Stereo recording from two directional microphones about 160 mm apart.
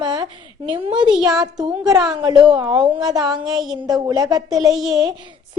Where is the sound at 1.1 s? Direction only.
5° right (ahead or behind).